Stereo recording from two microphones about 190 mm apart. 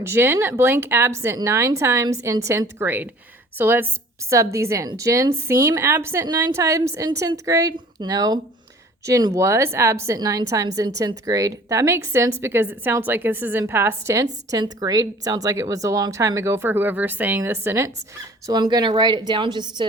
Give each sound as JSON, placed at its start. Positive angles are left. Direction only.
{"t": 0.0, "sound": "a woman's voice", "side_deg": -10}